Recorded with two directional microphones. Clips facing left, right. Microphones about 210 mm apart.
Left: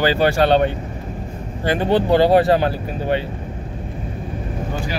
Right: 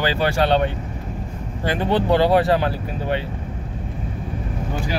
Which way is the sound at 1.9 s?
40° left (ahead or behind).